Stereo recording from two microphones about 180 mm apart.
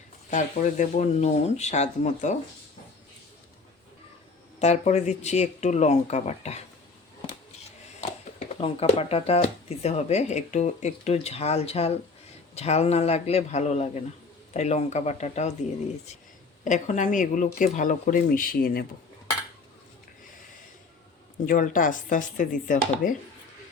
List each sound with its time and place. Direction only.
0.3 s speech: 40° left (ahead or behind)
4.6 s speech: 40° left (ahead or behind)
8.4 s speech: 35° left (ahead or behind)
16.6 s speech: 45° left (ahead or behind)
21.4 s speech: 50° left (ahead or behind)